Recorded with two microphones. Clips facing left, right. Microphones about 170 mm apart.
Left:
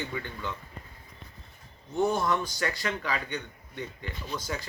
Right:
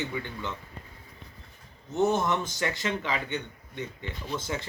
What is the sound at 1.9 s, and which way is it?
A man's voice, 20° right (ahead or behind).